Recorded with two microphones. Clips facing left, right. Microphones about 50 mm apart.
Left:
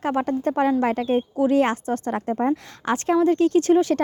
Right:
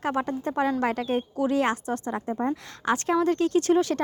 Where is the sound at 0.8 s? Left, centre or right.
Left.